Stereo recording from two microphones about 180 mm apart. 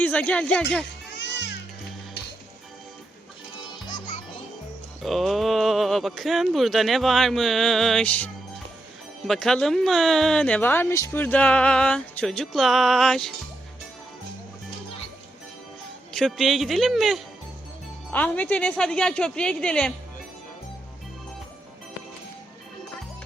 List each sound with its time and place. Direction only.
0.0 s speech: 10° left (ahead or behind)
1.1 s music: 75° left (ahead or behind)
5.0 s speech: centre (ahead or behind)
16.1 s speech: centre (ahead or behind)
18.1 s speech: 10° left (ahead or behind)